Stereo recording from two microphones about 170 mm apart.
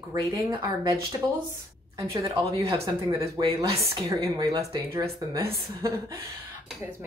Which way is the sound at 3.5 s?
30° right (ahead or behind).